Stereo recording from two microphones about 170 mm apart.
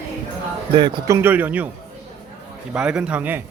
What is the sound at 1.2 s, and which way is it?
Speech, 10° right (ahead or behind).